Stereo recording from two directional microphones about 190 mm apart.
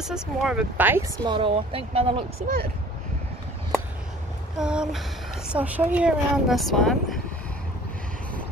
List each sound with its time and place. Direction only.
0.0 s speech: 5° right (ahead or behind)
1.2 s speech: 25° right (ahead or behind)
4.6 s speech: 5° right (ahead or behind)